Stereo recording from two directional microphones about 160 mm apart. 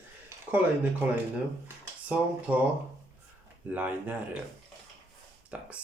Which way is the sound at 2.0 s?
10° right (ahead or behind).